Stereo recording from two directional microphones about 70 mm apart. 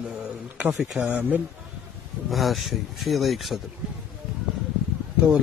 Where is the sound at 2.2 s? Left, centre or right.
Centre.